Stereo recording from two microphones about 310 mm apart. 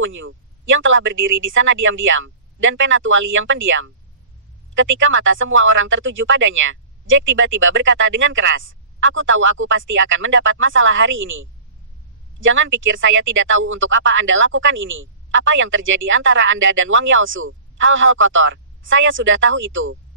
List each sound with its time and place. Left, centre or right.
0.0 s speech: right